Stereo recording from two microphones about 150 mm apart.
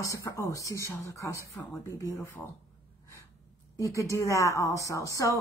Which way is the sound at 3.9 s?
20° left (ahead or behind).